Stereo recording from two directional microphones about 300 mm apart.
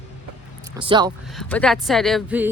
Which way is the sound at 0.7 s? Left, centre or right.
Centre.